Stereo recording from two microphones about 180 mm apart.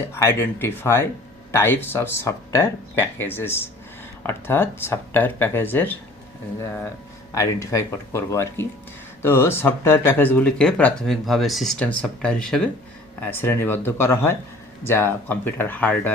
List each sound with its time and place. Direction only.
0.1 s speech: 15° left (ahead or behind)
7.3 s speech: 15° left (ahead or behind)